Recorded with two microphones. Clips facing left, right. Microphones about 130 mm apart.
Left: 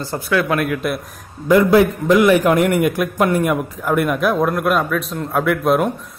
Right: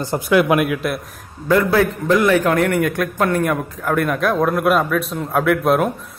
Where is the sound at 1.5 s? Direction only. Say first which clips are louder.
Left 3 dB; 15° left (ahead or behind).